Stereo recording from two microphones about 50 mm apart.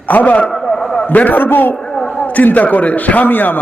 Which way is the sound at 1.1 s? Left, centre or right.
Left.